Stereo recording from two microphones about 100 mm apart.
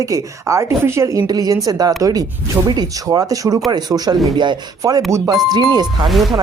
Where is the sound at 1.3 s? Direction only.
40° right (ahead or behind).